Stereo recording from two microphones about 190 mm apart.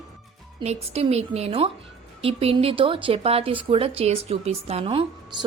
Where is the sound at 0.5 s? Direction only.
30° right (ahead or behind).